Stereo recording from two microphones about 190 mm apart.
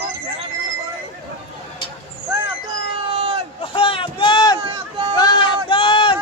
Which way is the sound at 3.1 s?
30° right (ahead or behind).